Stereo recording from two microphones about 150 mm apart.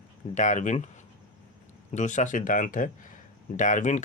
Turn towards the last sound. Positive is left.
turn(degrees=55)  # may be behind; listen again after turning